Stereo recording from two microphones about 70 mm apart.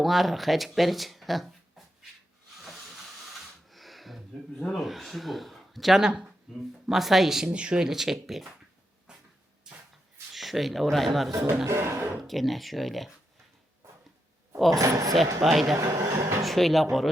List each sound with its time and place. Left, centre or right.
0.0 s speech: centre
2.6 s hiss: centre
3.3 s a sound: centre
6.8 s speech: centre
9.1 s vehicle: centre
9.7 s shuffle: centre
10.3 s speech: centre
11.6 s speech: right
12.3 s speech: centre
14.8 s speech: right
15.4 s speech: centre
15.7 s speech: right
16.4 s speech: centre